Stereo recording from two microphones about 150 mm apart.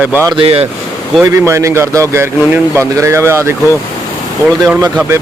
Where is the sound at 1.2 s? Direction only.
20° right (ahead or behind).